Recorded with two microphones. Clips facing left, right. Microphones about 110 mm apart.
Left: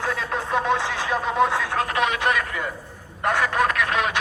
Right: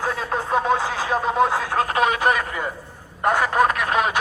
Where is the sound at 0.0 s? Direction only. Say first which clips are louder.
Right 2 dB; 40° right (ahead or behind).